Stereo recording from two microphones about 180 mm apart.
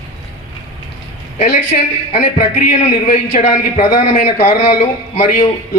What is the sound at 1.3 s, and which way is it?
A man's voice, 40° left (ahead or behind).